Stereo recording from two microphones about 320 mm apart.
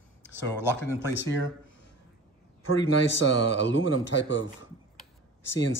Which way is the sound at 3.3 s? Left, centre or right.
Left.